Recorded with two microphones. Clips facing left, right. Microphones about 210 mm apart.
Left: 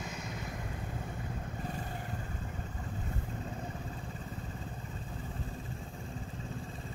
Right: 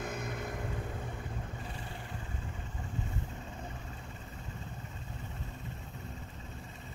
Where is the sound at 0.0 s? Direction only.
55° right (ahead or behind).